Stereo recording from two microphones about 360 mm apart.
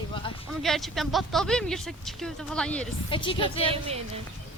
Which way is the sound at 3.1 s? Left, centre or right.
Centre.